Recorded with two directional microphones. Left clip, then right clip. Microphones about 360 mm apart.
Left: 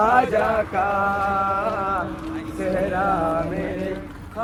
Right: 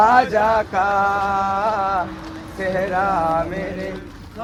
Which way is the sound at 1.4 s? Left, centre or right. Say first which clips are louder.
Right 3 dB; right.